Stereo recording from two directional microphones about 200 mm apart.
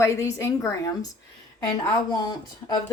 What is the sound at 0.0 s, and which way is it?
Speech, 15° left (ahead or behind).